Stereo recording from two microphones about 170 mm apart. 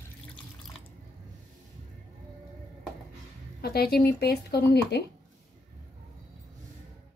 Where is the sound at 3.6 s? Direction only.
65° left (ahead or behind).